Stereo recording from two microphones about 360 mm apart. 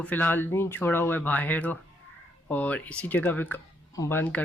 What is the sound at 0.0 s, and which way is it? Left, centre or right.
Speech, centre.